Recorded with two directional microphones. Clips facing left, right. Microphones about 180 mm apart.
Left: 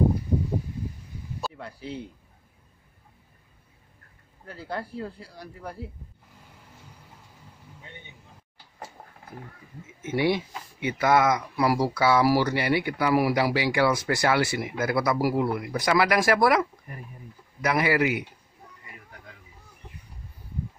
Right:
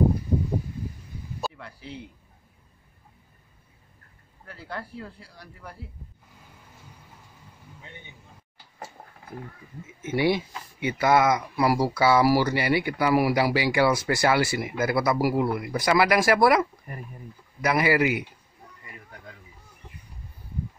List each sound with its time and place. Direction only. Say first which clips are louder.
1.6 s a sound: left 4 dB; 40° left (ahead or behind)
4.5 s speech: left 3 dB; 35° left (ahead or behind)
10.1 s a man's voice: right 1 dB; 5° right (ahead or behind)